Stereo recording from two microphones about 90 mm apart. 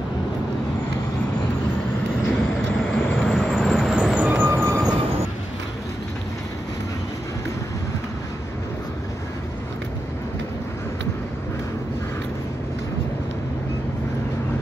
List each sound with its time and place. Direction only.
2.2 s vehicle: 10° left (ahead or behind)
4.1 s vehicle: 15° right (ahead or behind)
4.5 s vehicle: 30° right (ahead or behind)